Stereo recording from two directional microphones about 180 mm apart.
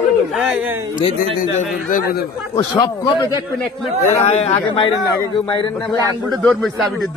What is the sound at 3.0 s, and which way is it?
Speech, 25° left (ahead or behind).